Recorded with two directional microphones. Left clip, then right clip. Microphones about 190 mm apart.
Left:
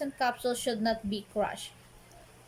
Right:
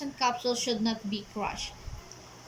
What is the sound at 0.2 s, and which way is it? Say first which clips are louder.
A woman's voice: right 3 dB; 60° left (ahead or behind).